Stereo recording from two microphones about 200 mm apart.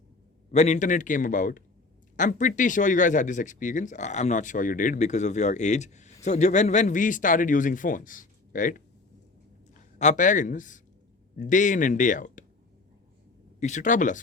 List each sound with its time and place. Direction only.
0.5 s speech: 35° left (ahead or behind)
10.0 s speech: 40° left (ahead or behind)
13.6 s speech: 35° left (ahead or behind)